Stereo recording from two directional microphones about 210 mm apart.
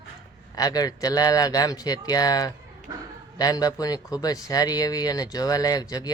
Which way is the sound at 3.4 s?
15° left (ahead or behind).